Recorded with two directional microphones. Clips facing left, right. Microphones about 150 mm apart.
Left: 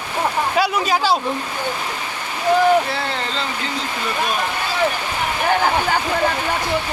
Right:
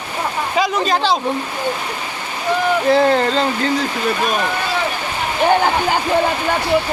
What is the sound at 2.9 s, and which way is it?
Speech, 45° right (ahead or behind).